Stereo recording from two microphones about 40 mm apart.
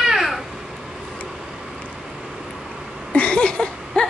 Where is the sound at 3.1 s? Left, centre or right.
Left.